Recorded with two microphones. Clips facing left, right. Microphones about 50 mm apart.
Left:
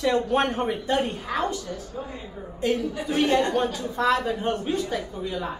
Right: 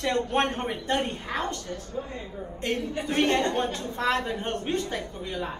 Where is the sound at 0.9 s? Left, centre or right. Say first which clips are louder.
Even; right.